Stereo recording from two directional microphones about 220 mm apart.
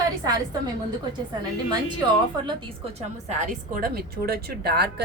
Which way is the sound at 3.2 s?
35° right (ahead or behind).